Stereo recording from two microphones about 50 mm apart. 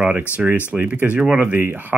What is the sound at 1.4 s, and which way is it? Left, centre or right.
Speech, right.